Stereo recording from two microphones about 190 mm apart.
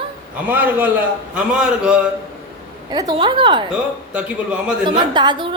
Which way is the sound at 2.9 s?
20° right (ahead or behind).